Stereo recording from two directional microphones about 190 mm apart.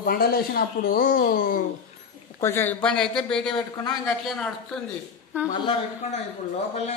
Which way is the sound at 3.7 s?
20° left (ahead or behind).